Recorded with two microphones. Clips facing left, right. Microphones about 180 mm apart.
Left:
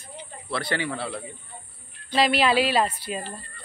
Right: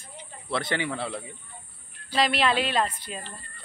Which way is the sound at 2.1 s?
5° left (ahead or behind).